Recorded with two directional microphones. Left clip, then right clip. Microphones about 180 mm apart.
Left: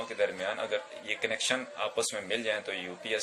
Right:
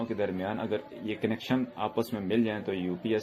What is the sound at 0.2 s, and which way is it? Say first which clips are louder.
Speech: left 4 dB; 30° right (ahead or behind).